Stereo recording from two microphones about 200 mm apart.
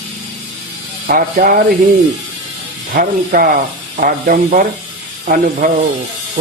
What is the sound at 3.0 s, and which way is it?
Speech, 45° right (ahead or behind).